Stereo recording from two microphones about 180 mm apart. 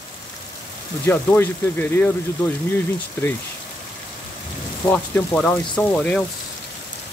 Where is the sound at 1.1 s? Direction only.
10° left (ahead or behind).